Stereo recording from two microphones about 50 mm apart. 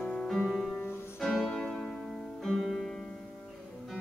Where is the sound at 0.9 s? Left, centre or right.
Left.